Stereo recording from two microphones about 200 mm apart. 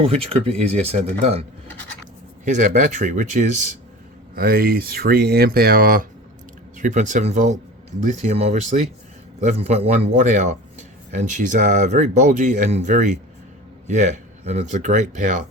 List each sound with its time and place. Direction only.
0.0 s speech: 30° right (ahead or behind)
4.4 s speech: 50° right (ahead or behind)